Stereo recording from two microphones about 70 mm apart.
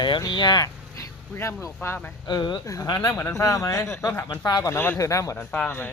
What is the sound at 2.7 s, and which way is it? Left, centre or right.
Speech, left.